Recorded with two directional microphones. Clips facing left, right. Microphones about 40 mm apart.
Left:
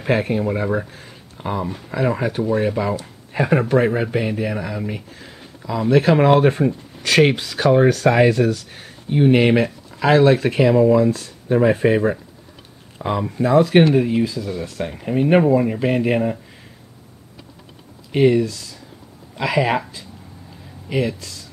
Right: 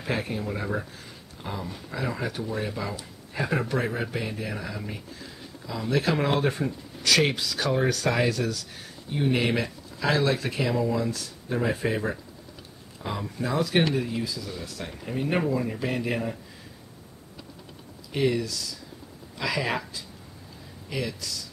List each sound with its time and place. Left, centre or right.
0.0 s speech: left
18.1 s speech: left